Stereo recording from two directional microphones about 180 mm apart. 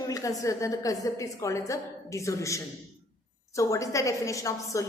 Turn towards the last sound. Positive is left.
turn(degrees=20)  # may be behind; listen again after turning